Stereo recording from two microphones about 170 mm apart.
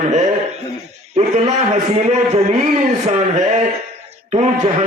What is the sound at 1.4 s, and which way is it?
A man's voice, 40° right (ahead or behind).